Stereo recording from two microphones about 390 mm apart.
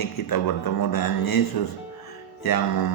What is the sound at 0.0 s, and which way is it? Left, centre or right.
Speech, left.